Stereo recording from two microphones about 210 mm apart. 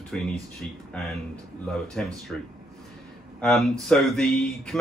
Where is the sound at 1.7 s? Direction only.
Centre (ahead or behind).